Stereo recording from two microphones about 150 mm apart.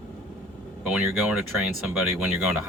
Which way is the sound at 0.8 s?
5° right (ahead or behind).